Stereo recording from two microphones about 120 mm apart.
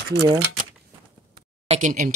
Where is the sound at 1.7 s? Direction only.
90° right.